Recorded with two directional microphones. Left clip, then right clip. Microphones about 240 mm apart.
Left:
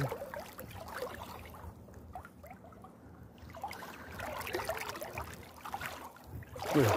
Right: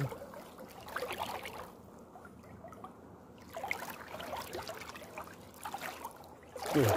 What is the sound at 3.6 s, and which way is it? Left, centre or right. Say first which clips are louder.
Boat: right 1 dB; centre.